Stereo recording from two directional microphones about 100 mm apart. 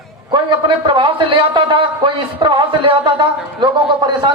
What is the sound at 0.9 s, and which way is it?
A man's voice, 60° right (ahead or behind).